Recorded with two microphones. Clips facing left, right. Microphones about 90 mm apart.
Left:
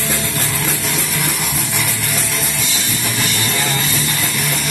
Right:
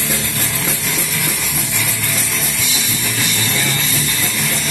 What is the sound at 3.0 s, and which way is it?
Music, 20° left (ahead or behind).